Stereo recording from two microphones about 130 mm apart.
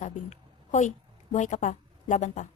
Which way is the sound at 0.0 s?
65° left (ahead or behind).